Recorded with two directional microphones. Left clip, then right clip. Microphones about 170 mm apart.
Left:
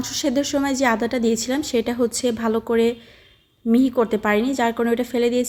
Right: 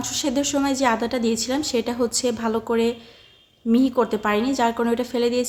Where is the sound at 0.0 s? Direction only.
25° left (ahead or behind).